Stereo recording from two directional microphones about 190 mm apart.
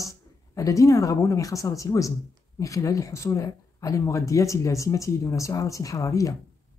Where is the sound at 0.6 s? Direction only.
15° left (ahead or behind).